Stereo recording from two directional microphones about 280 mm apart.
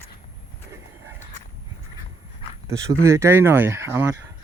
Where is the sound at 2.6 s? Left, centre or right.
Centre.